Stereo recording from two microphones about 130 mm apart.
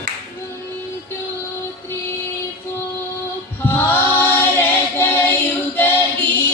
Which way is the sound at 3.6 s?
15° left (ahead or behind).